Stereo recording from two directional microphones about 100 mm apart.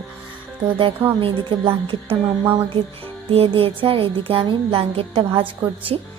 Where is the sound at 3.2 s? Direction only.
70° right (ahead or behind).